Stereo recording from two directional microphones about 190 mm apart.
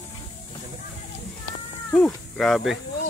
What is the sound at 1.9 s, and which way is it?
Speech, centre (ahead or behind).